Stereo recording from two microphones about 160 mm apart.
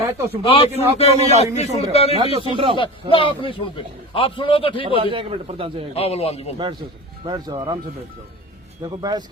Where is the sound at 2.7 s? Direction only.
30° left (ahead or behind).